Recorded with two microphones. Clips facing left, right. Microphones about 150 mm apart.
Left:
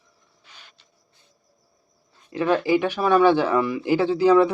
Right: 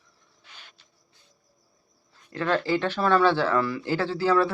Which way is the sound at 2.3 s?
15° left (ahead or behind).